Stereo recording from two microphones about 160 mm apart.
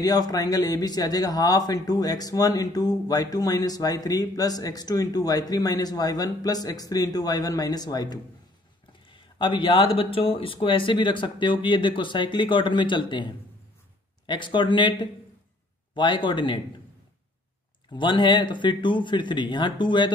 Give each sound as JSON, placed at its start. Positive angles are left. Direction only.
{"t": 0.0, "sound": "speech", "side_deg": 25}
{"t": 17.8, "sound": "speech", "side_deg": 30}